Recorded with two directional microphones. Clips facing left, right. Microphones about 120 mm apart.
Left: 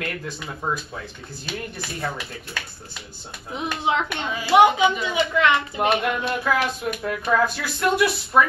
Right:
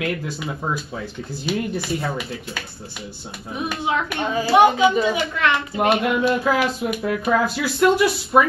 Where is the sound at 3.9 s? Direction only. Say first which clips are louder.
Right 1 dB; 20° left (ahead or behind).